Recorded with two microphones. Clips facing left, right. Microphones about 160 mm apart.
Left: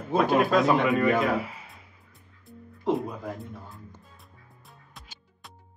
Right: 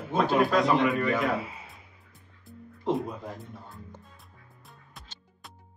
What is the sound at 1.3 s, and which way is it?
Speech, 25° right (ahead or behind).